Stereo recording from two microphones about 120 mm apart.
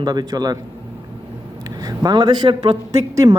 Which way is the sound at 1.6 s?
30° right (ahead or behind).